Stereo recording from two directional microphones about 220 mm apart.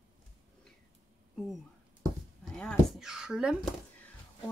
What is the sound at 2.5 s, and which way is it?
Speech, centre (ahead or behind).